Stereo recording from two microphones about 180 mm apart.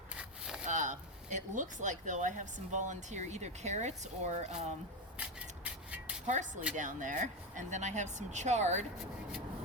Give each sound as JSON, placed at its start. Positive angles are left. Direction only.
{"t": 0.1, "sound": "wood", "side_deg": -5}
{"t": 0.7, "sound": "speech", "side_deg": -45}
{"t": 6.2, "sound": "speech", "side_deg": -40}